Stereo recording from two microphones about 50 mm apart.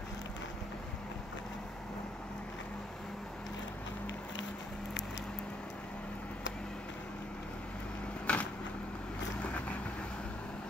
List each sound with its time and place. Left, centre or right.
8.3 s vehicle: left